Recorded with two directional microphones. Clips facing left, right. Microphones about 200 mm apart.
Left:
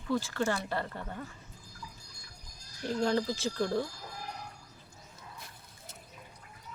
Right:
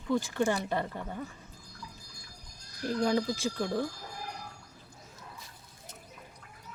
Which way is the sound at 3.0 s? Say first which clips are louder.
Right 1 dB; 10° right (ahead or behind).